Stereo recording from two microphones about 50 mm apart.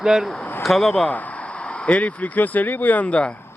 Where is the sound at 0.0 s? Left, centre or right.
Centre.